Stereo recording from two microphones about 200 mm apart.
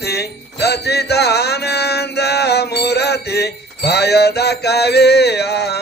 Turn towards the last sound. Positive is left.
turn(degrees=55)  # may be behind; listen again after turning